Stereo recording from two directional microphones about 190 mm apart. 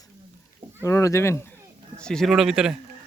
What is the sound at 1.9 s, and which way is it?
Speech, 5° left (ahead or behind).